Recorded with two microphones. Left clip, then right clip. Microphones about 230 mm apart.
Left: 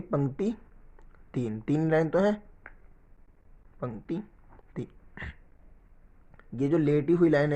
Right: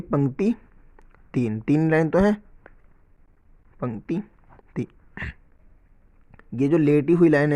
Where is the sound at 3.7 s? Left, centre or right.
Right.